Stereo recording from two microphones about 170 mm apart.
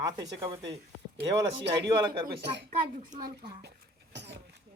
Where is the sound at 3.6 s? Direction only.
85° right.